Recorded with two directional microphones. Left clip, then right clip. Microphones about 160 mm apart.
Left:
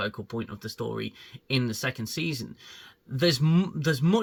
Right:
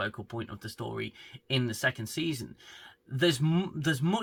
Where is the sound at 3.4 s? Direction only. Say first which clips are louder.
Left 3 dB; 10° right (ahead or behind).